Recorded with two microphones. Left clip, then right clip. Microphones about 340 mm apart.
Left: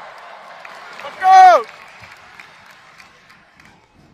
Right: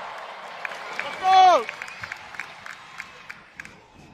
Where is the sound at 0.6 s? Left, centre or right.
Right.